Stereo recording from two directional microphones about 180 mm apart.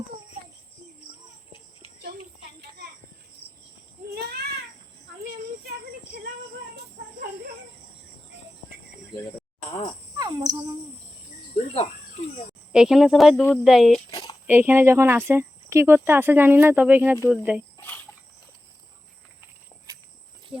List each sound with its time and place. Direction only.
4.1 s a sound: 60° right (ahead or behind)
7.0 s snake: 60° right (ahead or behind)
10.2 s cricket: 20° right (ahead or behind)
11.7 s cricket: 35° left (ahead or behind)
12.7 s speech: 5° right (ahead or behind)
17.7 s cricket: 10° left (ahead or behind)
19.9 s insect: 20° right (ahead or behind)